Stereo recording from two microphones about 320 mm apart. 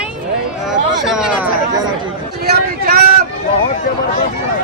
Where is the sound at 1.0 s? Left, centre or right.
Centre.